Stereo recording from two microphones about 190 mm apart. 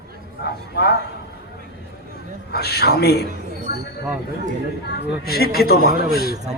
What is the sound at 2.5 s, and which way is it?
Speech, 55° left (ahead or behind).